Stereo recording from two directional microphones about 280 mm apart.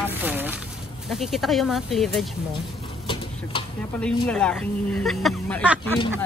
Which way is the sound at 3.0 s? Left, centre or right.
Centre.